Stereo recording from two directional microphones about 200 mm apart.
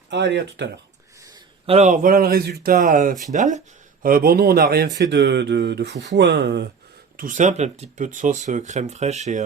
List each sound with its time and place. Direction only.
0.1 s speech: 60° right (ahead or behind)
1.6 s speech: 35° right (ahead or behind); by 6.7 s 55° right (ahead or behind)
7.2 s speech: 40° right (ahead or behind)